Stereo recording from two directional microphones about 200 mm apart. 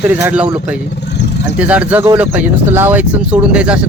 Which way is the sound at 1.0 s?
55° left (ahead or behind).